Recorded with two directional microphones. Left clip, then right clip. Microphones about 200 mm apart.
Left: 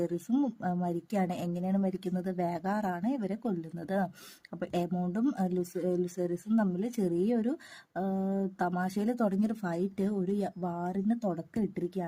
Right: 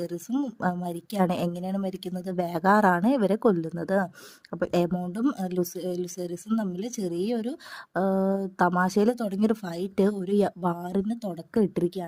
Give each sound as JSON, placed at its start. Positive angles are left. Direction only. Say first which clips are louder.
{"t": 0.0, "sound": "a woman's voice", "louder": "right 1 dB", "side_deg": -35}